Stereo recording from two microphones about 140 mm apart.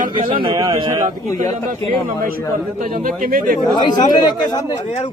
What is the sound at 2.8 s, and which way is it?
Speech, 85° right.